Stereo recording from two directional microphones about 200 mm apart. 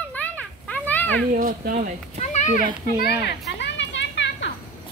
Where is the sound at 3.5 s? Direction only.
60° left (ahead or behind).